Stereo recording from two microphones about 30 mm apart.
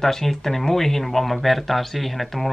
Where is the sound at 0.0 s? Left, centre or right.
Centre.